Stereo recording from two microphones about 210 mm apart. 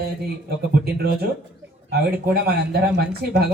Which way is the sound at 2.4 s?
50° right (ahead or behind).